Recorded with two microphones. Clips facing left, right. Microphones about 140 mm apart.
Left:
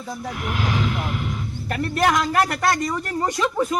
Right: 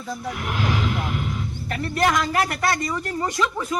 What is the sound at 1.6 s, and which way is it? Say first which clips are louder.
Speech: left 4 dB; 55° left (ahead or behind).